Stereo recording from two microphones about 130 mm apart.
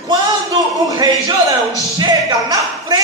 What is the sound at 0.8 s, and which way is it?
Speech, 30° right (ahead or behind).